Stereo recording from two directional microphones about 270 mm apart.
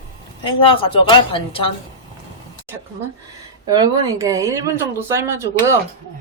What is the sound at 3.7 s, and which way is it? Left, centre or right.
Speech, centre.